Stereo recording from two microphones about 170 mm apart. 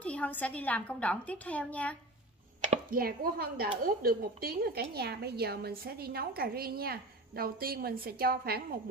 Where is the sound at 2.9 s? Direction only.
60° right (ahead or behind).